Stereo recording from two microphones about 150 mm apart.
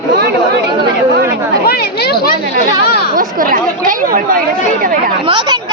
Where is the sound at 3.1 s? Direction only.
70° right (ahead or behind).